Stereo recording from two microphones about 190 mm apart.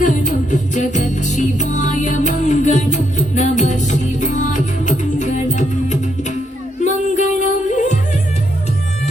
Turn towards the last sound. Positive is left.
turn(degrees=40)  # may be behind; listen again after turning